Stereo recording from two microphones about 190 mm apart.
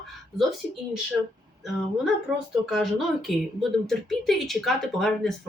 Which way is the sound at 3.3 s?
Centre (ahead or behind).